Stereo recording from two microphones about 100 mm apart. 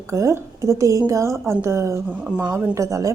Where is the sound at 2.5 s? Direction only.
30° right (ahead or behind).